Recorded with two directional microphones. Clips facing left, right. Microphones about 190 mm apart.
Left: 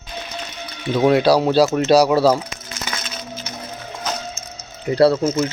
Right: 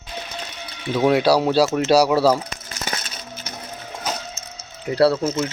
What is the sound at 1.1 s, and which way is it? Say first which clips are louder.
A man's voice: left 2 dB; 10° right (ahead or behind).